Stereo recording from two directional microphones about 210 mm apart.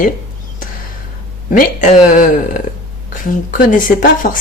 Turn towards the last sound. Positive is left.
turn(degrees=40)  # may be behind; listen again after turning